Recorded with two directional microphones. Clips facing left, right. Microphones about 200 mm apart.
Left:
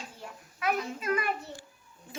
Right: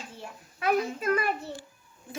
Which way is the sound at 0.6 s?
35° right (ahead or behind).